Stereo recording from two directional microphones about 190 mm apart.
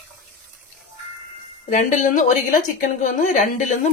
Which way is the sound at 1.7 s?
40° left (ahead or behind).